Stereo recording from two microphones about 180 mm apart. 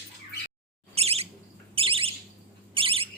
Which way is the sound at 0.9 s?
35° right (ahead or behind).